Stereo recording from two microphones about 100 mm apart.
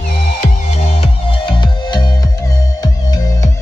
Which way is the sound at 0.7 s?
75° left (ahead or behind).